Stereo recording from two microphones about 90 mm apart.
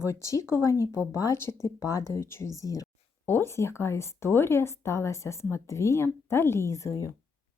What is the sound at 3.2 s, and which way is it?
Speech, 25° left (ahead or behind).